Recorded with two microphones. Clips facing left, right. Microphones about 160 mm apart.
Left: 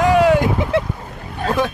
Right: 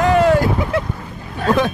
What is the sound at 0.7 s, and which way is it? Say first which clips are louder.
Speech: left 2 dB; 30° left (ahead or behind).